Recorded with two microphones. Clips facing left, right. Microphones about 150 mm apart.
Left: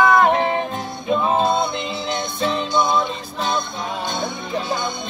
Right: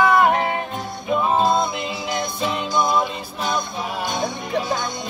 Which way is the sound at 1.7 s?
25° left (ahead or behind).